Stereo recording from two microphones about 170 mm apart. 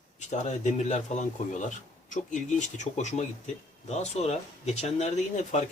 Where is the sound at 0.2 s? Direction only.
45° left (ahead or behind).